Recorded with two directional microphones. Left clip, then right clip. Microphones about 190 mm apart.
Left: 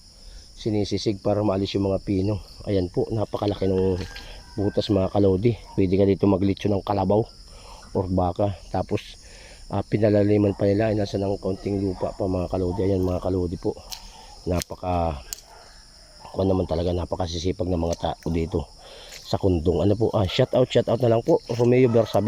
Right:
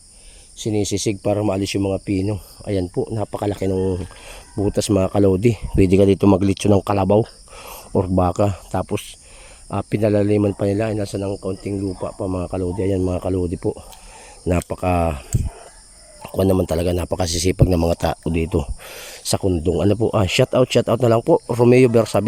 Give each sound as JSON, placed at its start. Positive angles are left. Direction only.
{"t": 0.6, "sound": "speech", "side_deg": -55}
{"t": 2.6, "sound": "speech", "side_deg": -30}
{"t": 7.6, "sound": "speech", "side_deg": -50}
{"t": 8.8, "sound": "a man's voice", "side_deg": -30}
{"t": 16.2, "sound": "a man's voice", "side_deg": -60}
{"t": 18.3, "sound": "speech", "side_deg": -30}
{"t": 18.6, "sound": "speech", "side_deg": -50}
{"t": 19.4, "sound": "speech", "side_deg": -30}